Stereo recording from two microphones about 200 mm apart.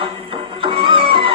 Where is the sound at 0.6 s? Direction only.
25° right (ahead or behind).